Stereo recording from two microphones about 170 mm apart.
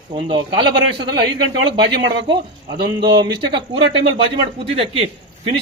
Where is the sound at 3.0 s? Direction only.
25° right (ahead or behind).